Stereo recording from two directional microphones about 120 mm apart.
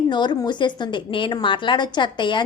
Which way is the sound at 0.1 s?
40° left (ahead or behind).